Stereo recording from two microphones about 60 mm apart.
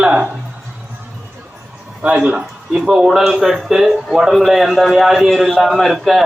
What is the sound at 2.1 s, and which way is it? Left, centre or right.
Speech, centre.